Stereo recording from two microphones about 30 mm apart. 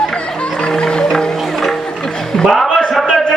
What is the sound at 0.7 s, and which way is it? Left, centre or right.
Music, left.